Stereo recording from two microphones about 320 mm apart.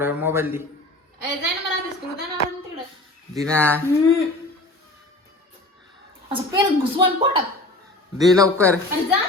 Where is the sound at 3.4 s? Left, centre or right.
Centre.